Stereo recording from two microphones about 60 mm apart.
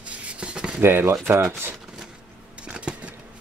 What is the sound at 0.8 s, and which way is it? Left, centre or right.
Speech, right.